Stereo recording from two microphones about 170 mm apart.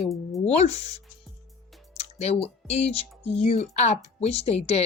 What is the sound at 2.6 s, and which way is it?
Speech, 40° left (ahead or behind).